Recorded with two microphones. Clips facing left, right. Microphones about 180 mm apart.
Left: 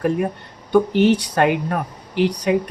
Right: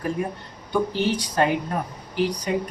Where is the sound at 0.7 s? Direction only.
70° left (ahead or behind).